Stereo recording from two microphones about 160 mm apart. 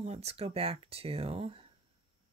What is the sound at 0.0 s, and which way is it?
Speech, 40° right (ahead or behind).